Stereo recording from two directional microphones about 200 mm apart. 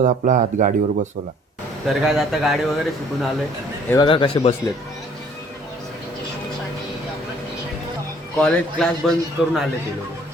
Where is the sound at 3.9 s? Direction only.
25° left (ahead or behind).